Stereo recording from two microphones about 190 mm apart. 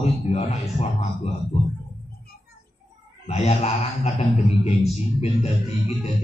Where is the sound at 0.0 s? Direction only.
35° left (ahead or behind).